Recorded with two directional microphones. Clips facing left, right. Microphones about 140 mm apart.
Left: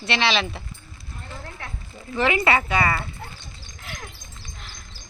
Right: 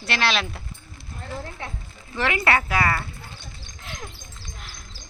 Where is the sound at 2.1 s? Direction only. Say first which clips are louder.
Left 2 dB; centre (ahead or behind).